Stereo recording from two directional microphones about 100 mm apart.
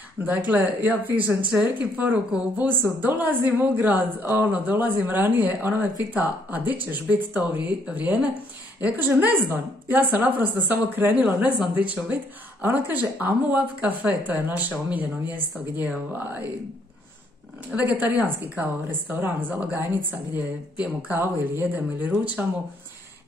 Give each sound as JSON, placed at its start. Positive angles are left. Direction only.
{"t": 0.2, "sound": "a woman's voice", "side_deg": -20}
{"t": 17.6, "sound": "a woman's voice", "side_deg": -15}